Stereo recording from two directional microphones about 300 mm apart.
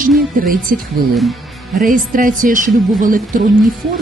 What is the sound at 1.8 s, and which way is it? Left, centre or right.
Speech, right.